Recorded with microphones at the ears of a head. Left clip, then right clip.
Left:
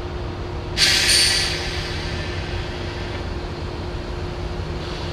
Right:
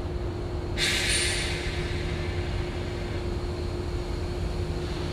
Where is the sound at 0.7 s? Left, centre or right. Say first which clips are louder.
Left 10 dB; left.